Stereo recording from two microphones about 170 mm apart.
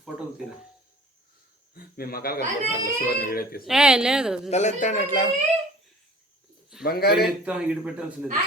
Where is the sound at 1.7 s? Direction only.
60° left (ahead or behind).